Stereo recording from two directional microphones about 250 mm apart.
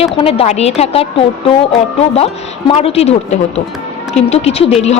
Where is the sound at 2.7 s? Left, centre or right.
Left.